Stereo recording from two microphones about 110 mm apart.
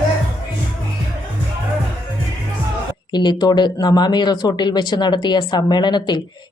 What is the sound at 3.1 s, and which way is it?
Speech, 40° left (ahead or behind).